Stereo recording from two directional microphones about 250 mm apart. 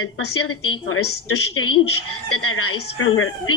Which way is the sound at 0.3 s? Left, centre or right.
Left.